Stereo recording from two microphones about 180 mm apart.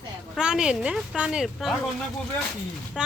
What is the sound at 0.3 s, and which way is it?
Speech, 5° right (ahead or behind).